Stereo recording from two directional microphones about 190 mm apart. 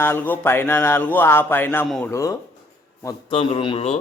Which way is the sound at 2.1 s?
15° left (ahead or behind).